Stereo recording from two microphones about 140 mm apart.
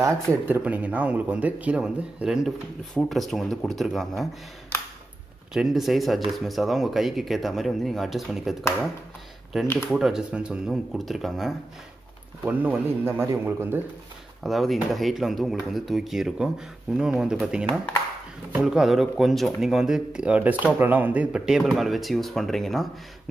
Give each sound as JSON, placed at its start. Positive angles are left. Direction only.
{"t": 0.0, "sound": "speech", "side_deg": -20}
{"t": 0.6, "sound": "speech", "side_deg": -10}
{"t": 5.5, "sound": "speech", "side_deg": -5}
{"t": 12.4, "sound": "speech", "side_deg": -15}
{"t": 14.4, "sound": "speech", "side_deg": 0}